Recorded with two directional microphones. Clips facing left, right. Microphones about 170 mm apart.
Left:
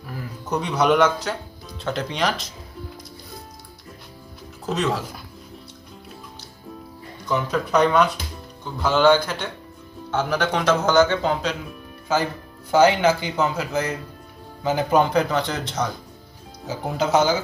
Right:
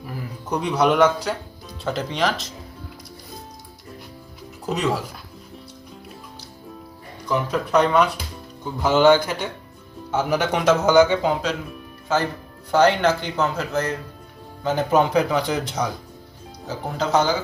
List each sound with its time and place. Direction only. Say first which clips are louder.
0.0 s speech: right 1 dB; 10° right (ahead or behind)
4.6 s speech: even; 15° right (ahead or behind)
7.3 s speech: even; 5° right (ahead or behind)
16.6 s speech: left 2 dB; 5° left (ahead or behind)